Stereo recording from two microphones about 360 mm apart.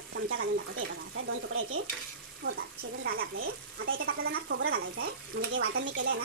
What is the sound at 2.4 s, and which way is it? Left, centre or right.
Speech, right.